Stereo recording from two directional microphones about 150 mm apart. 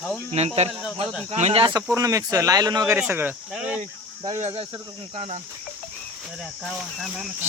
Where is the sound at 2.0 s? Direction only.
20° right (ahead or behind); by 3.8 s 5° right (ahead or behind).